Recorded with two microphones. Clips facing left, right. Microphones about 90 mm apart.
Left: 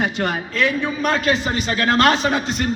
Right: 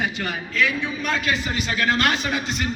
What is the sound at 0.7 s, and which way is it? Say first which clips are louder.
A man's voice: left 5 dB; 45° left (ahead or behind).